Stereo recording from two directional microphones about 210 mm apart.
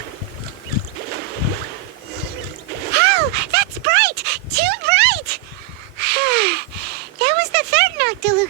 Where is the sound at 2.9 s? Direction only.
50° right (ahead or behind).